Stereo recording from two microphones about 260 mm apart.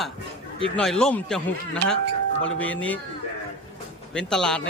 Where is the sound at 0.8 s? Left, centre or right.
Centre.